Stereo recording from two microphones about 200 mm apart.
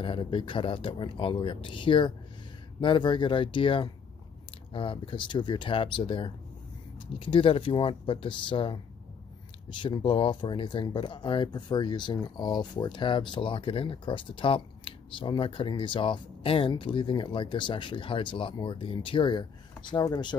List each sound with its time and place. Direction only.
0.0 s speech: 25° left (ahead or behind)